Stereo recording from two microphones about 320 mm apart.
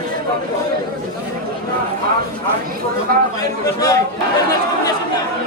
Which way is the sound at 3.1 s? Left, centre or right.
Right.